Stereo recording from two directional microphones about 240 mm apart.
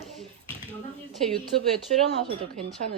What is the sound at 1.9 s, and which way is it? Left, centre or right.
Speech, right.